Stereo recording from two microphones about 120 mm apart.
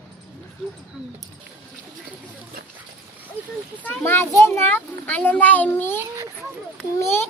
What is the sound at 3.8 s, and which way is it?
A child's voice, 10° left (ahead or behind).